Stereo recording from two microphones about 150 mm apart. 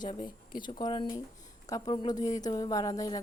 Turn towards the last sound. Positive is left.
turn(degrees=25)  # may be behind; listen again after turning